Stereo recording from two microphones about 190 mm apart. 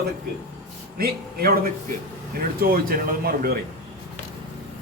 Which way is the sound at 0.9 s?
50° right (ahead or behind).